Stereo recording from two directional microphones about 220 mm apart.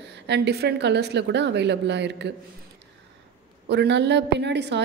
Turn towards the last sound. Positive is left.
turn(degrees=-50)  # may be behind; listen again after turning